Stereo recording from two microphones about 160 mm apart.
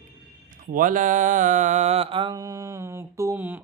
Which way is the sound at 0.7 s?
55° right (ahead or behind).